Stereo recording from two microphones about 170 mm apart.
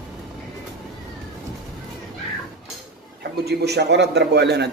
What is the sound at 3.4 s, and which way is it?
A man's voice, 75° right (ahead or behind).